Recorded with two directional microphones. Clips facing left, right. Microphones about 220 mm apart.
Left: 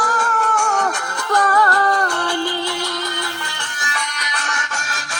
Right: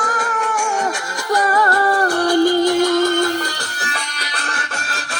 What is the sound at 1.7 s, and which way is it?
Music, 30° right (ahead or behind).